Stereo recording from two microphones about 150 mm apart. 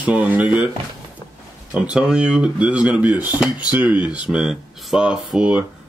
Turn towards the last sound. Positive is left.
turn(degrees=-5)  # may be behind; listen again after turning